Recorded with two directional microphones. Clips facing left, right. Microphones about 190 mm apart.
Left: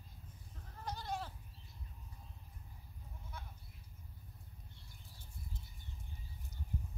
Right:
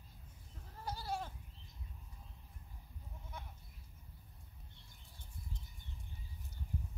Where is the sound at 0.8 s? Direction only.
5° right (ahead or behind).